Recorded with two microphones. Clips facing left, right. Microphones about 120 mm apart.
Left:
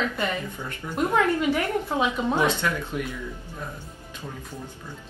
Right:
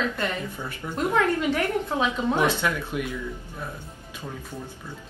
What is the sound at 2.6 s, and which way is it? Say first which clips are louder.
Speech: right 1 dB; 15° right (ahead or behind).